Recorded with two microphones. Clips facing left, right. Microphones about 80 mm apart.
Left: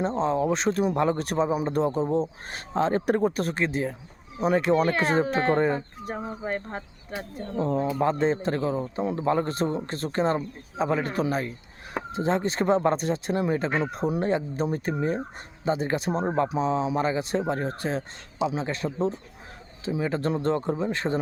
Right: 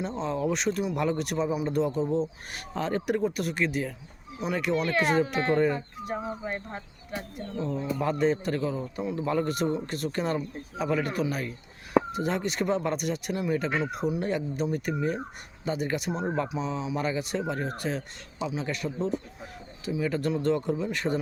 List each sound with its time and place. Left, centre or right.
0.0 s speech: left
2.5 s speech: left
7.6 s speech: left
7.9 s a man's voice: left